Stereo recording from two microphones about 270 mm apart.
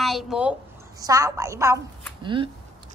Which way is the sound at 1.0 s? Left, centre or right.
Centre.